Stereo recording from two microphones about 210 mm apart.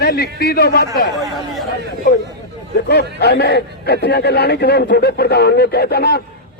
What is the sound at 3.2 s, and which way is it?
A man's voice, 50° left (ahead or behind).